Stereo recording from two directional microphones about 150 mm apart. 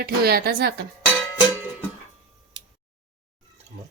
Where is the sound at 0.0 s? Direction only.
90° right.